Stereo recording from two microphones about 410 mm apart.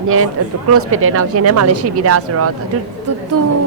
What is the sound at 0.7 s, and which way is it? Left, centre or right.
Speech, right.